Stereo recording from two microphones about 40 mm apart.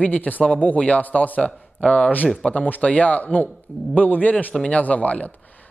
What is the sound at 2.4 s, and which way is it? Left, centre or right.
A man's voice, left.